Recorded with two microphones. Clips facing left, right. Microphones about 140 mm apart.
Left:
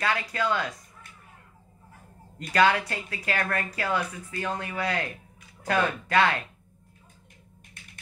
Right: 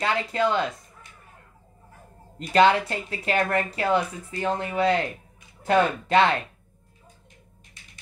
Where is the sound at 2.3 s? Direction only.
25° right (ahead or behind).